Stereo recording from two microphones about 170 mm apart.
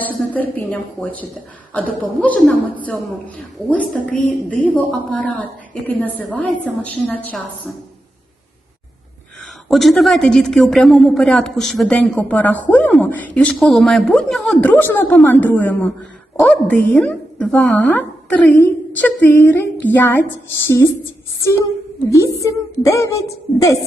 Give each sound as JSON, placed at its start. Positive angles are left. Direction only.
{"t": 0.0, "sound": "a woman's voice", "side_deg": 10}
{"t": 9.6, "sound": "a woman's voice", "side_deg": 0}